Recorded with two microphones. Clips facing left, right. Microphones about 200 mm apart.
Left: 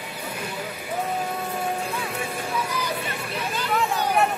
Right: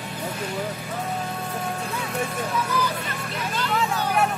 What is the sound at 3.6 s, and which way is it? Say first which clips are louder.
Vehicle: even; 10° left (ahead or behind).